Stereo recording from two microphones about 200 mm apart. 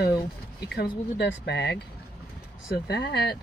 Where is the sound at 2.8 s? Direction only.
55° left (ahead or behind).